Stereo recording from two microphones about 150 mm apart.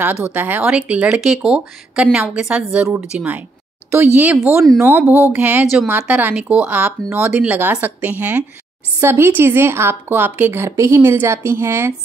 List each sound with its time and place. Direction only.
0.3 s speech: 10° right (ahead or behind)